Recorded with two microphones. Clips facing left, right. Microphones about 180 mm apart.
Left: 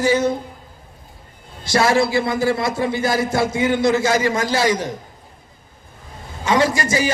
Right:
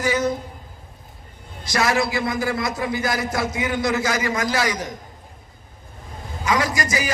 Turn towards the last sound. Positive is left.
turn(degrees=30)  # may be behind; listen again after turning